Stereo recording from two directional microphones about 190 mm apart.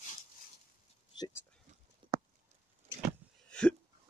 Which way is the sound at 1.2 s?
15° left (ahead or behind).